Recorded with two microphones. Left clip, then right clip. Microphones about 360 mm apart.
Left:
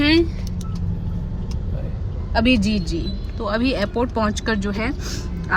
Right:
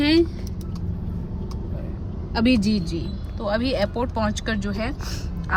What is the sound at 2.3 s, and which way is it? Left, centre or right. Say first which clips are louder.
A woman's voice: left 3 dB; centre.